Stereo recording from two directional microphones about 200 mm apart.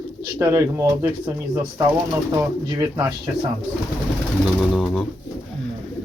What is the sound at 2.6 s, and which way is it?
Speech, 20° right (ahead or behind).